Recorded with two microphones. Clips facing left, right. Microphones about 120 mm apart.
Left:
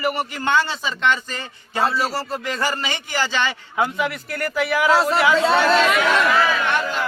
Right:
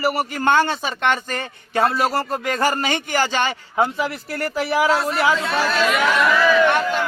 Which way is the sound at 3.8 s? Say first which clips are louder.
Right 1 dB; 30° right (ahead or behind).